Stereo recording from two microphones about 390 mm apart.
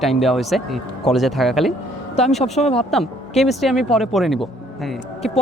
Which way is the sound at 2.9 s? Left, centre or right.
Centre.